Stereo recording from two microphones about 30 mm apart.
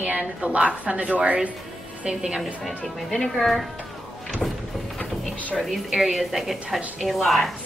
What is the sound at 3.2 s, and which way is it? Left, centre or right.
Speech, centre.